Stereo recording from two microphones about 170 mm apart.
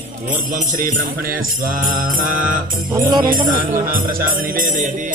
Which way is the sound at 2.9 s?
20° right (ahead or behind).